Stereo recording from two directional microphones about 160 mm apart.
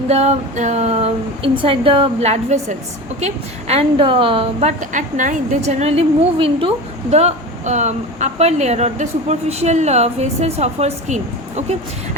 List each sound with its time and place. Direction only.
0.1 s a woman's voice: 45° right (ahead or behind)
4.8 s a woman's voice: 50° right (ahead or behind)